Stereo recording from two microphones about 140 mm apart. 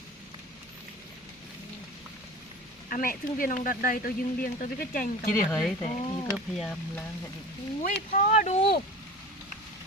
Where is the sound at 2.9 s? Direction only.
85° left.